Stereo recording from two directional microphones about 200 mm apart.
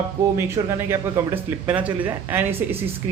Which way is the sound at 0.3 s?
15° right (ahead or behind).